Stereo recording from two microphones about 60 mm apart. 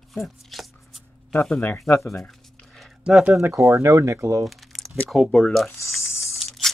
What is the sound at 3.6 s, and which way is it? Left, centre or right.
Speech, right.